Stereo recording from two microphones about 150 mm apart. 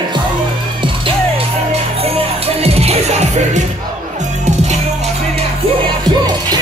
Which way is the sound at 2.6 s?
45° right (ahead or behind).